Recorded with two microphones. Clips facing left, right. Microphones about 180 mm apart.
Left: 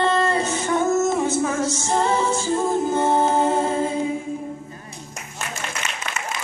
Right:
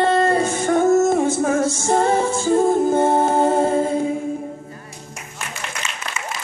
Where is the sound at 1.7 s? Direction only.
50° right (ahead or behind).